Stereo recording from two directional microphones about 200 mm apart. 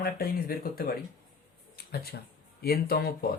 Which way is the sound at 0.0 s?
50° left (ahead or behind).